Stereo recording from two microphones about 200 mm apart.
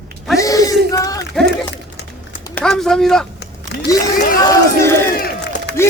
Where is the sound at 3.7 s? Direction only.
55° left (ahead or behind).